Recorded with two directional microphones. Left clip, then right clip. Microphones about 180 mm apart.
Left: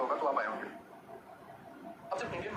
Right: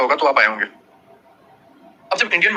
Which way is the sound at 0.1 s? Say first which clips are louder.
Right 17 dB; 75° right (ahead or behind).